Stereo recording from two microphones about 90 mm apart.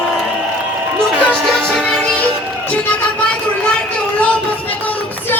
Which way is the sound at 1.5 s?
5° left (ahead or behind).